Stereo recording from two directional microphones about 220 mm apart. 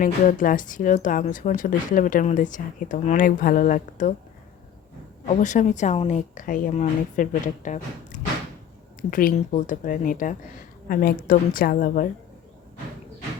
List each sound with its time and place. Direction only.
0.0 s speech: 35° left (ahead or behind)
5.3 s speech: 35° left (ahead or behind)